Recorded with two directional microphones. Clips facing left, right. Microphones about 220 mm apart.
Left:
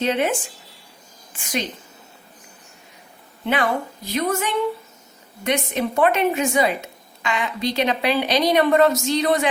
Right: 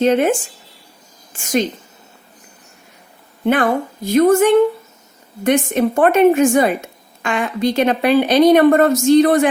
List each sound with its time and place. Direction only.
0.0 s speech: 45° right (ahead or behind)
3.4 s speech: 50° right (ahead or behind)